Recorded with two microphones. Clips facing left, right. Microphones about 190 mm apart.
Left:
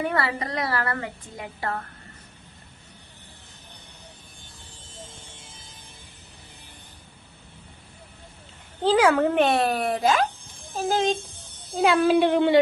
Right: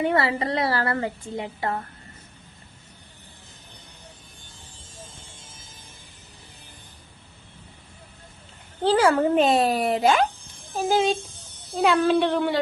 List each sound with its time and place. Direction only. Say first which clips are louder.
0.0 s a woman's voice: right 4 dB; 25° right (ahead or behind)
9.0 s speech: right 1 dB; 5° right (ahead or behind)
9.8 s a woman's voice: right 2 dB; 25° right (ahead or behind)
10.8 s speech: right 2 dB; 10° right (ahead or behind)
11.8 s speech: left 1 dB; centre (ahead or behind); by 12.5 s 20° left (ahead or behind)